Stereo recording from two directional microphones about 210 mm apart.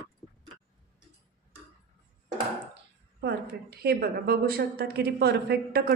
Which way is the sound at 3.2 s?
50° right (ahead or behind).